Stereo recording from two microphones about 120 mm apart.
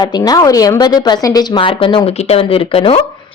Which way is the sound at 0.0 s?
30° left (ahead or behind).